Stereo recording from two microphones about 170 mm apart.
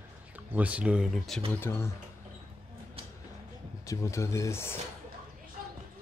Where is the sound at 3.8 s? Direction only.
20° left (ahead or behind).